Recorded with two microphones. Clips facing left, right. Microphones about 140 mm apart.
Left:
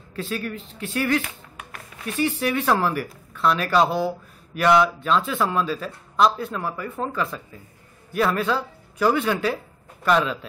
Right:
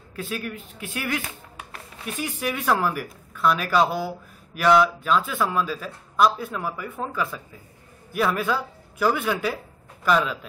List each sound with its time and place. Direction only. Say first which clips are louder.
0.1 s a man's voice: left 2 dB; 5° right (ahead or behind)